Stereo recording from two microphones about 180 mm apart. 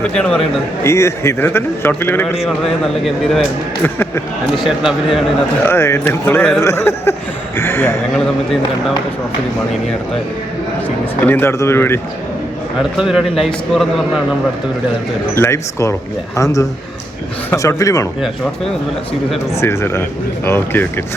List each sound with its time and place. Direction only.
0.0 s a man's voice: 5° left (ahead or behind)
0.9 s speech: 15° left (ahead or behind)
2.8 s a man's voice: centre (ahead or behind)
3.8 s speech: 10° left (ahead or behind)
4.6 s a man's voice: centre (ahead or behind)
5.6 s speech: 15° left (ahead or behind)
11.3 s speech: 15° left (ahead or behind)
13.0 s a man's voice: 5° right (ahead or behind)
15.4 s speech: 15° left (ahead or behind)
19.5 s speech: 15° left (ahead or behind)